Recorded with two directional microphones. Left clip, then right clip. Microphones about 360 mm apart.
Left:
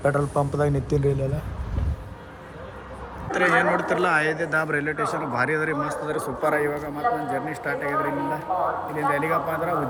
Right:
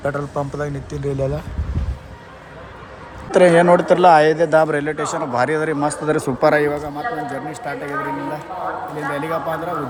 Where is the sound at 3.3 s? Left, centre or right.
Centre.